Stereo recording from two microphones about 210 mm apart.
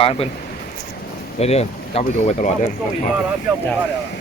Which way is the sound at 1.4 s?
30° left (ahead or behind).